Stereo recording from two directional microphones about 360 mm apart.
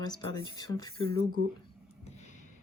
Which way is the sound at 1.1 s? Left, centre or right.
Right.